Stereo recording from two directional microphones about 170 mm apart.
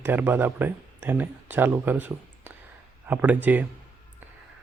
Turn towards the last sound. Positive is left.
turn(degrees=-10)  # may be behind; listen again after turning